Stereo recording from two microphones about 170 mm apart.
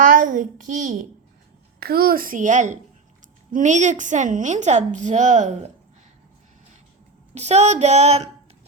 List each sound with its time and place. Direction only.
0.1 s a sound: 55° right (ahead or behind)
1.8 s a child's voice: 65° right (ahead or behind); by 5.5 s 45° right (ahead or behind)
7.3 s speech: 40° right (ahead or behind)